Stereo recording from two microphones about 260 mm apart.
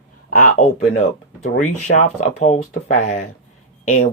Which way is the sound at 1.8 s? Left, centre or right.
Left.